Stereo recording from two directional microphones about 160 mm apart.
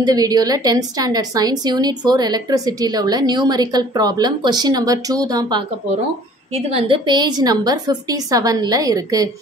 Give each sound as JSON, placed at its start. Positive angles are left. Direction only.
{"t": 0.0, "sound": "a woman's voice", "side_deg": -25}
{"t": 6.5, "sound": "a woman's voice", "side_deg": -35}